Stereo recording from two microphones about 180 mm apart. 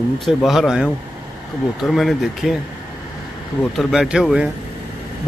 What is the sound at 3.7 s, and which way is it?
Speech, 5° right (ahead or behind).